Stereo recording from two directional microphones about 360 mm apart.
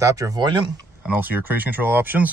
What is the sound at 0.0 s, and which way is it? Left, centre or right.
Speech, centre.